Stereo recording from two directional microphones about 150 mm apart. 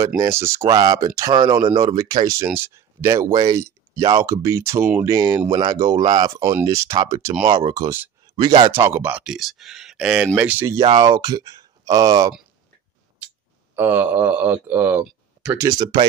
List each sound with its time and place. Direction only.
0.0 s speech: 20° right (ahead or behind); by 6.3 s 35° right (ahead or behind)
6.6 s speech: 20° right (ahead or behind)
10.8 s speech: 30° right (ahead or behind)
13.7 s speech: 15° right (ahead or behind)
15.8 s speech: 30° right (ahead or behind)